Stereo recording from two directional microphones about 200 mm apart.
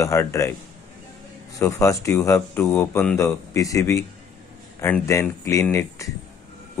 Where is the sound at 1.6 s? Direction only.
15° left (ahead or behind).